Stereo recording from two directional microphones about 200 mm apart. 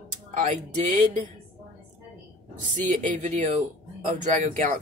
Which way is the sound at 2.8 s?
40° right (ahead or behind).